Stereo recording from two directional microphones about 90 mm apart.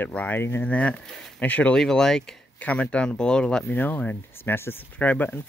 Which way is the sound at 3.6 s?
20° left (ahead or behind).